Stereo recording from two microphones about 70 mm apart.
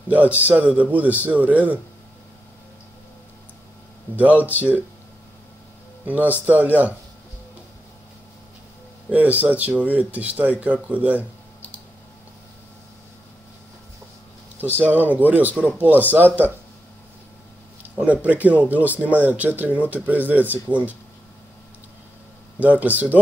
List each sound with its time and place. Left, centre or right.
0.4 s speech: right
4.2 s speech: right
6.0 s speech: right
9.1 s speech: right
14.8 s speech: right
17.9 s speech: right
22.6 s speech: right